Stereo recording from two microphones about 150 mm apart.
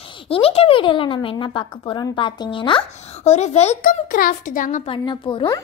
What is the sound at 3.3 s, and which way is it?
Speech, 45° left (ahead or behind).